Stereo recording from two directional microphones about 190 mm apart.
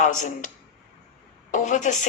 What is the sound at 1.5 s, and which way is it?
Speech, 40° left (ahead or behind).